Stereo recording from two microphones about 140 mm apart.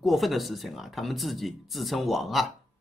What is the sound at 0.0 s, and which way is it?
Speech, centre (ahead or behind).